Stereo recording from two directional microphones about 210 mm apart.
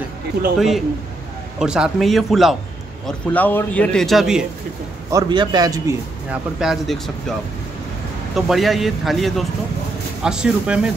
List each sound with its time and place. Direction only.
0.6 s a man's voice: centre (ahead or behind)
5.1 s a man's voice: 20° right (ahead or behind)
6.6 s a man's voice: centre (ahead or behind)
8.4 s a man's voice: centre (ahead or behind)